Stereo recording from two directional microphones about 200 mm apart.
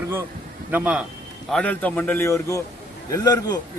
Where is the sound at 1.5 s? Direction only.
5° left (ahead or behind).